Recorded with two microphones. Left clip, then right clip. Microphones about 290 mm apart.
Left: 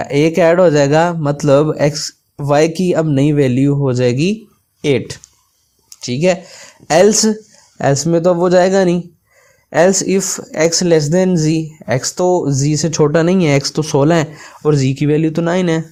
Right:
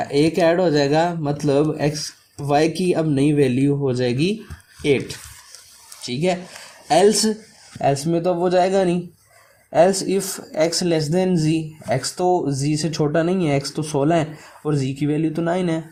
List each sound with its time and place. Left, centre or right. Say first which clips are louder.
0.0 s speech: left 5 dB; left